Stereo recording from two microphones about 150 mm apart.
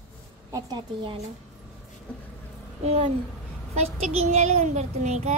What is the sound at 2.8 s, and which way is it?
A child's voice, 40° right (ahead or behind).